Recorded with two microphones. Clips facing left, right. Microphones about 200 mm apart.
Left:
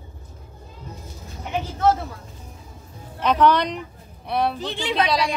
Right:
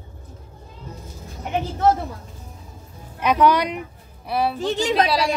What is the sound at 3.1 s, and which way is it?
Speech, 10° right (ahead or behind).